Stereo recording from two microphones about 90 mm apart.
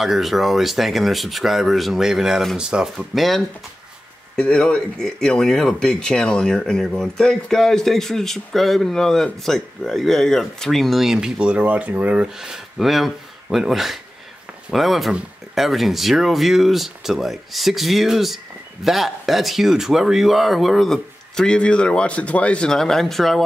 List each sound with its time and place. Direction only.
0.0 s speech: 5° right (ahead or behind)